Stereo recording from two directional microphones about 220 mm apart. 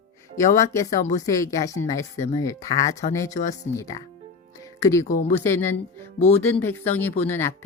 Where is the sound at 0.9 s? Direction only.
35° left (ahead or behind).